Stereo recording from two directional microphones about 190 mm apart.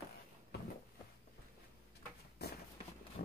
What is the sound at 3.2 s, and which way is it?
Engine, 50° left (ahead or behind).